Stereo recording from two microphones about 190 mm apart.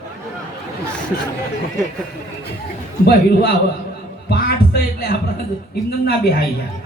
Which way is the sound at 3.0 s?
55° left (ahead or behind).